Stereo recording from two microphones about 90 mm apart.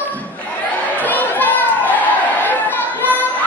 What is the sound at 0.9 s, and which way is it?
Chatter, 20° left (ahead or behind).